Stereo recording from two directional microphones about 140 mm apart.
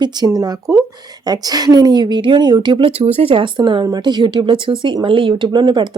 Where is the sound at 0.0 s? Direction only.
30° right (ahead or behind).